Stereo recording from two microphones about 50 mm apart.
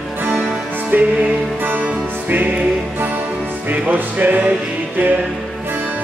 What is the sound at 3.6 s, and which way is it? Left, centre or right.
Music, right.